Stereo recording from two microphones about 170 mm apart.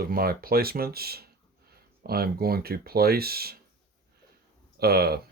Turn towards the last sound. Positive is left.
turn(degrees=-70)  # may be behind; listen again after turning